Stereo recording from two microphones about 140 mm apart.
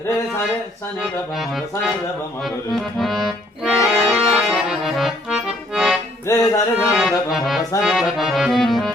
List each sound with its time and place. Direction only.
1.4 s accordion: centre (ahead or behind)
3.0 s accordion: centre (ahead or behind)
6.3 s music: 20° left (ahead or behind)
6.7 s accordion: 5° right (ahead or behind)